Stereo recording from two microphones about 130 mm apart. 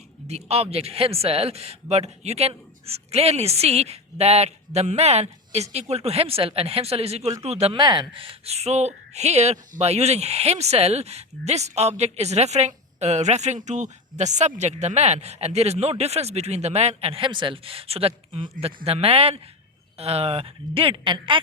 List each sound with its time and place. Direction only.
0.3 s a man's voice: 55° right (ahead or behind)